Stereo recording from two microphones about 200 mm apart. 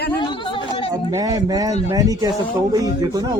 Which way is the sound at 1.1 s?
20° right (ahead or behind).